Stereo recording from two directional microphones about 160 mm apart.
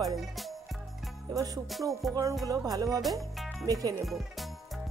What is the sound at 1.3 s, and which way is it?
Music, 20° right (ahead or behind).